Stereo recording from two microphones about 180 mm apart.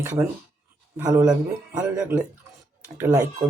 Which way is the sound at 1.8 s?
10° right (ahead or behind).